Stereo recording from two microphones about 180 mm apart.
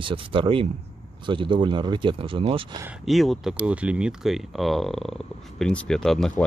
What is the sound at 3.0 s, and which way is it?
Speech, centre (ahead or behind).